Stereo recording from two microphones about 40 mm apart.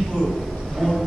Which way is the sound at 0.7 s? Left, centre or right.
Centre.